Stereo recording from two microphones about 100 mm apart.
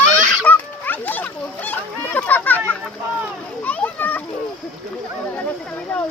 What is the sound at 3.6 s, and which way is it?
Children playing, 15° left (ahead or behind).